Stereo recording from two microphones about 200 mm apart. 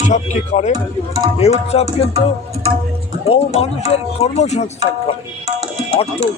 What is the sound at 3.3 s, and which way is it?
Music, 30° left (ahead or behind).